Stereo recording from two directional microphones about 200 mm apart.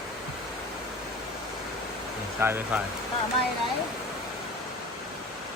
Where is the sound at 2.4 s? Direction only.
10° right (ahead or behind).